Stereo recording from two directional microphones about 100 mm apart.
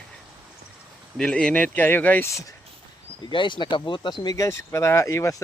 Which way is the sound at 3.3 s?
55° left (ahead or behind).